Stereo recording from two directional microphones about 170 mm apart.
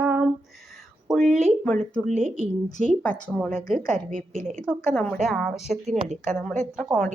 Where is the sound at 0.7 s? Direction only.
Centre (ahead or behind).